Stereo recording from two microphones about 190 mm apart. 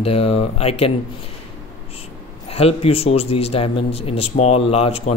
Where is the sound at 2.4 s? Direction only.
30° left (ahead or behind).